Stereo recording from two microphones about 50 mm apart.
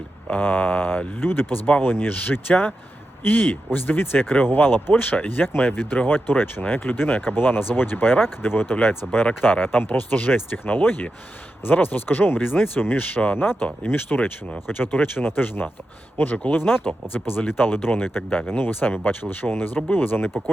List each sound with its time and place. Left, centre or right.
0.3 s speech: left